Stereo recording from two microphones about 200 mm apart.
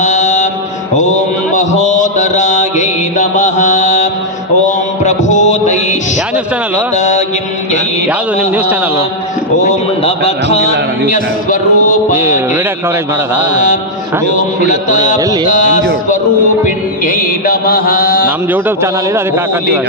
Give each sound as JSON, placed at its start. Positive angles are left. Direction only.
{"t": 0.0, "sound": "mantra", "side_deg": 35}
{"t": 6.9, "sound": "mantra", "side_deg": 35}
{"t": 9.6, "sound": "a sound", "side_deg": 35}
{"t": 13.5, "sound": "a sound", "side_deg": 40}
{"t": 16.6, "sound": "mantra", "side_deg": 45}
{"t": 18.3, "sound": "a man's voice", "side_deg": -10}